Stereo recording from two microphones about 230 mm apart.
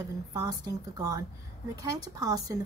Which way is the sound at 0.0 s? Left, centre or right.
Centre.